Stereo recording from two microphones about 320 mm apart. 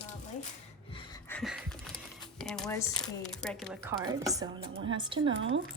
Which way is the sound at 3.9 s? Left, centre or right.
Centre.